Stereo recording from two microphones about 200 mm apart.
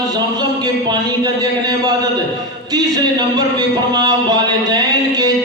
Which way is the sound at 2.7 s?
20° right (ahead or behind).